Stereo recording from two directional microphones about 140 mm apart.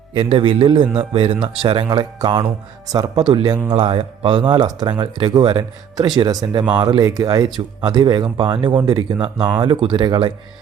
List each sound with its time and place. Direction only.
0.1 s speech: 40° right (ahead or behind)